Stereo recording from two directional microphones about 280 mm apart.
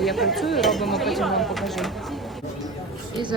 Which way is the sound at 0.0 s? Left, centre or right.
Centre.